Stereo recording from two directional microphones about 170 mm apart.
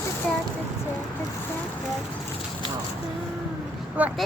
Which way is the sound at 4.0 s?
10° right (ahead or behind).